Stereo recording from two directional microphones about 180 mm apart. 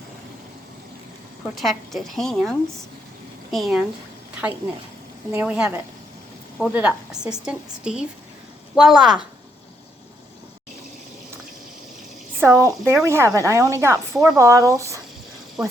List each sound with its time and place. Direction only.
1.5 s a woman's voice: centre (ahead or behind)
5.3 s a woman's voice: 5° right (ahead or behind)
12.4 s speech: 15° right (ahead or behind)